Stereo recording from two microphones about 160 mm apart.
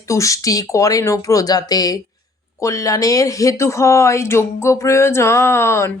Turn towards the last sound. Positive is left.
turn(degrees=15)  # may be behind; listen again after turning